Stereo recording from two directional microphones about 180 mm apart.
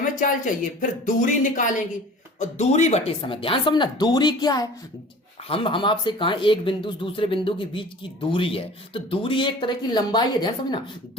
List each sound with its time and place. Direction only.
0.0 s speech: 45° left (ahead or behind); by 10.8 s 25° left (ahead or behind)